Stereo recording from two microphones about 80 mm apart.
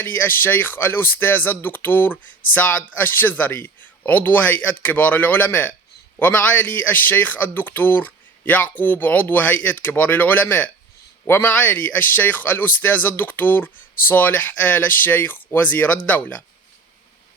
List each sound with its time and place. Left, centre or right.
0.0 s speech: left